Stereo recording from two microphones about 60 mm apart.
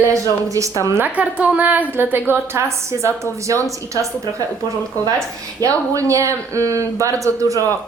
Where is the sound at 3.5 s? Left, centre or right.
Right.